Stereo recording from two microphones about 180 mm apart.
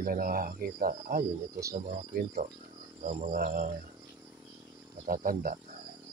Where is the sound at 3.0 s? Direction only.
50° right (ahead or behind).